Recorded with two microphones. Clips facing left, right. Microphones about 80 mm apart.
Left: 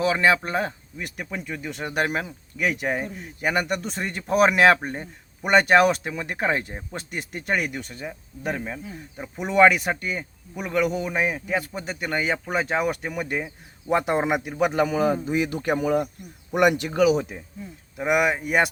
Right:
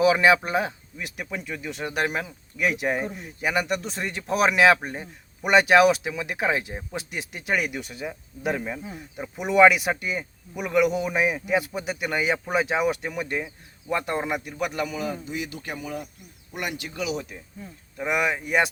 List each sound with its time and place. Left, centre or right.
0.0 s speech: centre
13.4 s a man's voice: centre; by 16.7 s left
16.9 s speech: left
17.9 s speech: centre